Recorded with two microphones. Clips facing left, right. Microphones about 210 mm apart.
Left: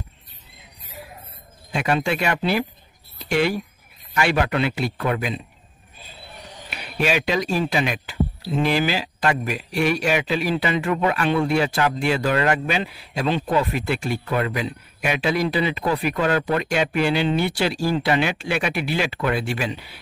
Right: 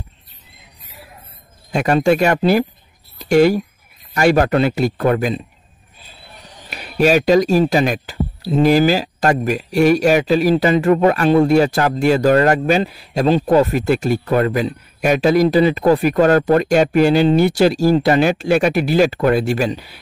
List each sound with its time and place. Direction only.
1.7 s a man's voice: 45° right (ahead or behind)
6.7 s speech: 40° right (ahead or behind)